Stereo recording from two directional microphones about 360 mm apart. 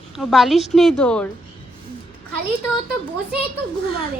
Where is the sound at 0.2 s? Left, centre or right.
Centre.